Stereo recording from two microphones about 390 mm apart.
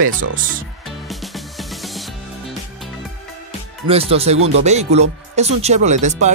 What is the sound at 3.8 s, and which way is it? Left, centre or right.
Speech, centre.